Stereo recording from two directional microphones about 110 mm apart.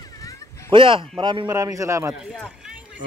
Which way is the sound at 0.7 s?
50° right (ahead or behind).